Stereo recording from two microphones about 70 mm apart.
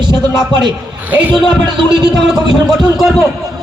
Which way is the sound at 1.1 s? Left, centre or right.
Right.